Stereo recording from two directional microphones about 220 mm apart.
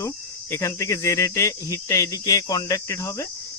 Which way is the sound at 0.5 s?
15° left (ahead or behind).